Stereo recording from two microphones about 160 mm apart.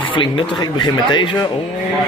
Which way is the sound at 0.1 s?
30° left (ahead or behind).